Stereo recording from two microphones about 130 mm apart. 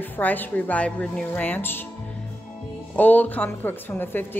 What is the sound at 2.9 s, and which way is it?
Speech, 15° left (ahead or behind).